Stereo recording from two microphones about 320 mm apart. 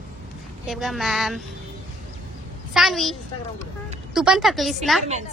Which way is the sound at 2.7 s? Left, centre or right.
Centre.